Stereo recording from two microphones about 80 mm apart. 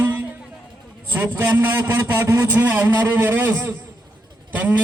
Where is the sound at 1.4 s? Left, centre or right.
Right.